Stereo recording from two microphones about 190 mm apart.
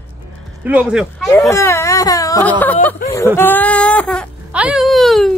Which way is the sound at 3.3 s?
10° left (ahead or behind).